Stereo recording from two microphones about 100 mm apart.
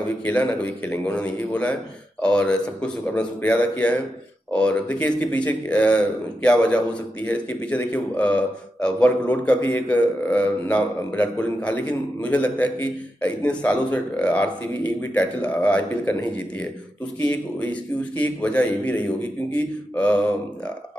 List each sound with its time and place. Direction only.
0.2 s a man's voice: 15° left (ahead or behind)
9.6 s a man's voice: 30° left (ahead or behind)
9.8 s a man's voice: 15° left (ahead or behind)